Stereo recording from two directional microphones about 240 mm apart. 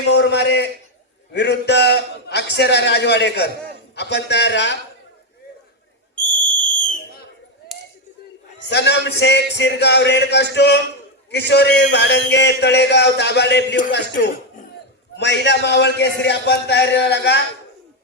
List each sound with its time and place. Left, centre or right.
0.1 s a man's voice: left
6.5 s whistle: centre
8.7 s a man's voice: left